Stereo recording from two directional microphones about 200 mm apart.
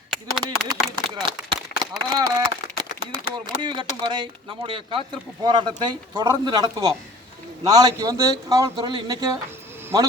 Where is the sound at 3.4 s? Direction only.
25° right (ahead or behind).